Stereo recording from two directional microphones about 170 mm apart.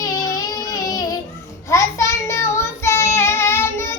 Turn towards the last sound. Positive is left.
turn(degrees=15)  # may be behind; listen again after turning